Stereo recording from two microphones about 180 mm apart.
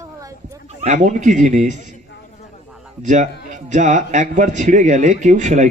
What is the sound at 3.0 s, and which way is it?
Speech, 45° right (ahead or behind).